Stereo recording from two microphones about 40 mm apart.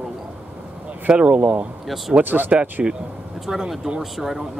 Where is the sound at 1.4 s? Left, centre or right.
Right.